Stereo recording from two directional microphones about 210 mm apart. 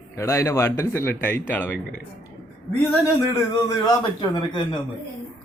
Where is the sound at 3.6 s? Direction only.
20° left (ahead or behind).